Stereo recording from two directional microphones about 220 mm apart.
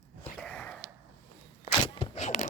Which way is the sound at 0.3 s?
5° left (ahead or behind).